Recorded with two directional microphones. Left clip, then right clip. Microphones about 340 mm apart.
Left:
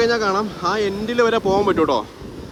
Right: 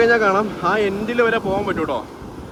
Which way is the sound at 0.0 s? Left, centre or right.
Centre.